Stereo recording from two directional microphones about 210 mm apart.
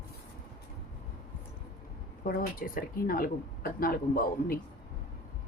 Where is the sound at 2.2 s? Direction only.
40° left (ahead or behind).